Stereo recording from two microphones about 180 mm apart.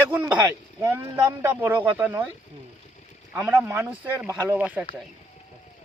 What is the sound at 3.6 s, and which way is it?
Speech, 15° right (ahead or behind).